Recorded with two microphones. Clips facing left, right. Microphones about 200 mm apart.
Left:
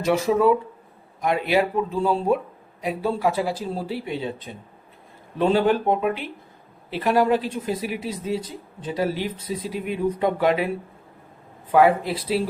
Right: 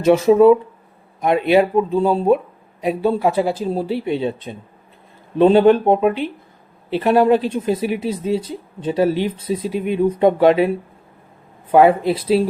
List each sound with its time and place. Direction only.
0.0 s speech: 25° right (ahead or behind)
5.4 s speech: 20° right (ahead or behind)
11.7 s speech: 25° right (ahead or behind)